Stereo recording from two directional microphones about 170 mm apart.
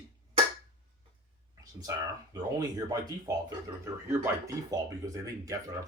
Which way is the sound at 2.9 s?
20° right (ahead or behind).